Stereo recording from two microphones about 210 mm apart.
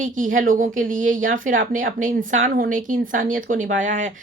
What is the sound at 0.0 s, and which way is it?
Speech, 40° right (ahead or behind).